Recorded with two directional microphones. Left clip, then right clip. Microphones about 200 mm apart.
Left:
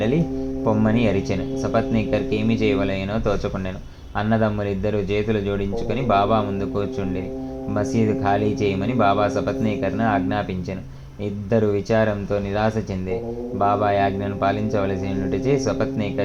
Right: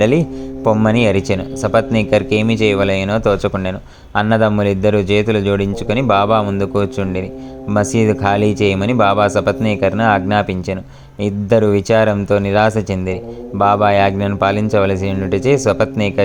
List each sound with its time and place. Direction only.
0.6 s a man's voice: 40° right (ahead or behind)